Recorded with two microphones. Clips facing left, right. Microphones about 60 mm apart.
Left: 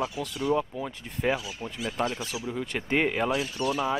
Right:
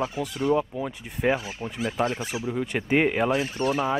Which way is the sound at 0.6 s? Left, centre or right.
Centre.